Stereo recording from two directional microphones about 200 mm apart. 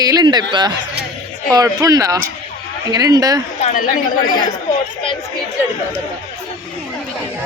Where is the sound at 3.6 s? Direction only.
40° left (ahead or behind).